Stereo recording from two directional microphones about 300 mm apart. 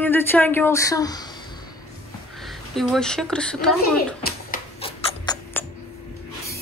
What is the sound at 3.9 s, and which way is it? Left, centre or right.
Rodents, left.